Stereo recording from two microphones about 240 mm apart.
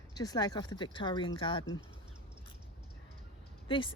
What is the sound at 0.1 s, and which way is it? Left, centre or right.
Speech, centre.